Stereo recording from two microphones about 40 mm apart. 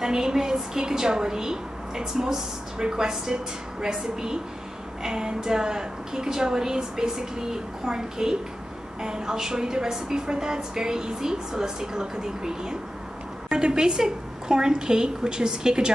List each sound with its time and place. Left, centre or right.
0.0 s a woman's voice: centre